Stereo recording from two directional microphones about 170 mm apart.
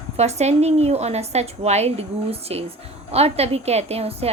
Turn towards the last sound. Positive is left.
turn(degrees=-35)  # may be behind; listen again after turning